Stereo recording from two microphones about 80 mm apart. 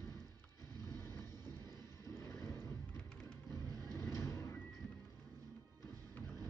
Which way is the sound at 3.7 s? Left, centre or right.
Right.